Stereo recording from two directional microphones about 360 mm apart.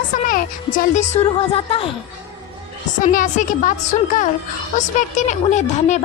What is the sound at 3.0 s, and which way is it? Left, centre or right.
A child's voice, left.